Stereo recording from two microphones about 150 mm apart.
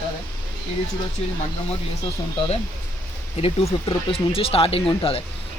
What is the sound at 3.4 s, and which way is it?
Speech, 45° left (ahead or behind).